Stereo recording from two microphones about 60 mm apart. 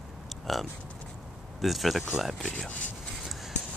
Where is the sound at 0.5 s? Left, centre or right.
Centre.